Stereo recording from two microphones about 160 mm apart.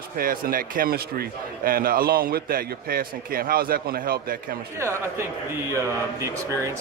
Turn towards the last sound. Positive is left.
turn(degrees=-15)  # may be behind; listen again after turning